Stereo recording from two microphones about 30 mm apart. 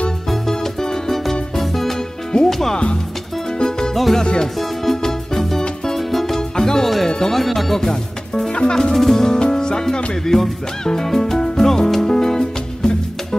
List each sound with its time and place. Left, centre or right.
0.3 s music: centre
2.3 s music: left
3.5 s music: left
3.9 s music: centre
4.2 s music: left
4.6 s music: centre
6.5 s music: centre
7.3 s music: centre
8.5 s music: left
8.9 s speech: centre
10.3 s music: centre